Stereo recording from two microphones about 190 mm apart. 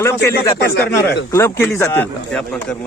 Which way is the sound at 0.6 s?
60° left (ahead or behind).